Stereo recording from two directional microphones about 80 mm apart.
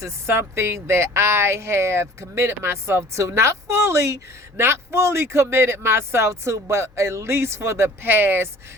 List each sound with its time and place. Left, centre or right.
0.0 s speech: right